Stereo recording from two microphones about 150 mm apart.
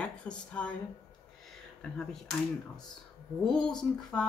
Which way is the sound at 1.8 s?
5° left (ahead or behind).